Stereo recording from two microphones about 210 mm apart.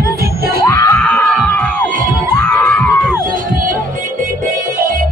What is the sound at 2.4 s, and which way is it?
Crowd, 5° left (ahead or behind).